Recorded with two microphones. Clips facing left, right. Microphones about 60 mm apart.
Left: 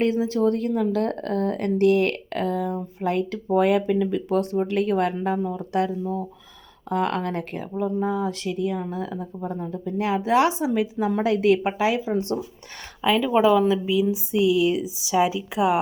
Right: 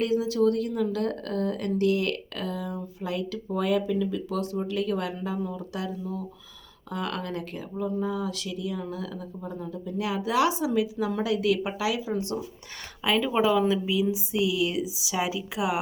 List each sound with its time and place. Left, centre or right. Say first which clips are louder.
0.0 s speech: left 2 dB; left
10.7 s a woman's voice: left 2 dB; left
11.2 s speech: left 6 dB; left
13.0 s speech: left 5 dB; centre